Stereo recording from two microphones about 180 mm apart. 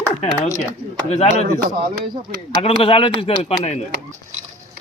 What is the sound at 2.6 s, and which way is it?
Speech, 30° left (ahead or behind).